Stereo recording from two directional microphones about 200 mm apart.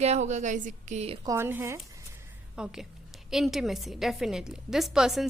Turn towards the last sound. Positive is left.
turn(degrees=0)  # may be behind; listen again after turning